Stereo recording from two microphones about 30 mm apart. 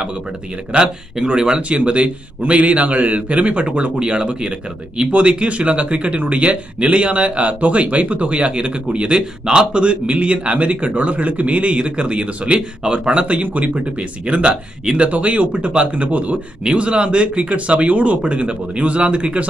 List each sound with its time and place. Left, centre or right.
0.7 s speech: right
1.7 s speech: right
13.4 s speech: right
16.6 s speech: right
18.2 s speech: right